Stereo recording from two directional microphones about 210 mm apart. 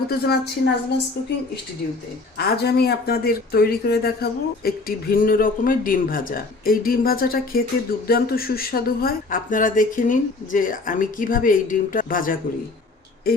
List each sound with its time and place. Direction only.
0.1 s speech: 50° left (ahead or behind)
2.6 s speech: 50° left (ahead or behind)